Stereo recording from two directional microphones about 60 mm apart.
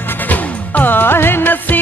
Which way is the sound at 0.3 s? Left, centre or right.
Left.